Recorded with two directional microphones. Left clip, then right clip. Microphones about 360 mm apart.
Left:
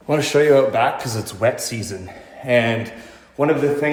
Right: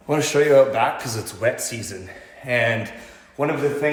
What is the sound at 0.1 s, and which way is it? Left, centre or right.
A man's voice, centre.